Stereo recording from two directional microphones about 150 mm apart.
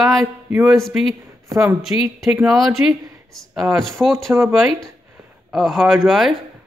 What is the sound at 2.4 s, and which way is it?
Speech, centre (ahead or behind).